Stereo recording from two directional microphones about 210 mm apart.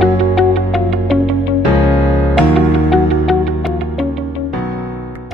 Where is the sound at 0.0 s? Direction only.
Centre (ahead or behind).